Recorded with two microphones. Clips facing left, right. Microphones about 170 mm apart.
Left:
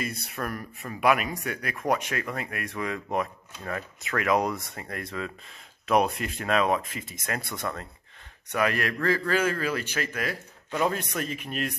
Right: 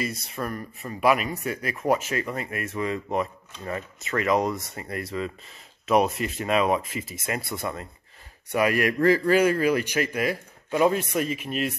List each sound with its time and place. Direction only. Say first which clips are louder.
0.1 s speech: right 2 dB; 65° left (ahead or behind)
0.4 s a man's voice: right 2 dB; 5° left (ahead or behind)